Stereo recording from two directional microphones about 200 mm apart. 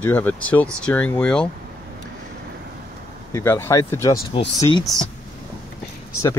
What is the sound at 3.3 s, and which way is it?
Speech, 10° left (ahead or behind).